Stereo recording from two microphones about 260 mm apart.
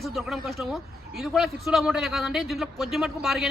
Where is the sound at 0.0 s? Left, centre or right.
Centre.